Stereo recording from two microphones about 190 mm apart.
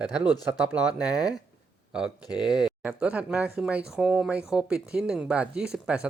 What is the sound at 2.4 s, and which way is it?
Speech, 5° right (ahead or behind).